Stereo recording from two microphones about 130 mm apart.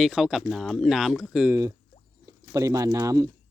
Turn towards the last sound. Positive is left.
turn(degrees=-25)  # may be behind; listen again after turning